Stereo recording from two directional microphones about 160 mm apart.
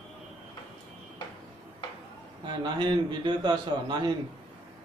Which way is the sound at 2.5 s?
30° right (ahead or behind).